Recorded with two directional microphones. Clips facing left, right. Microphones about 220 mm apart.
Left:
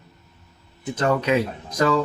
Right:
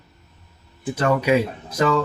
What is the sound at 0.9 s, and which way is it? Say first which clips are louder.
Speech: right 2 dB; 10° right (ahead or behind).